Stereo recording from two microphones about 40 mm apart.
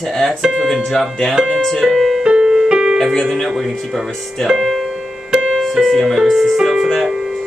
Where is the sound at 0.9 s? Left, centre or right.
Centre.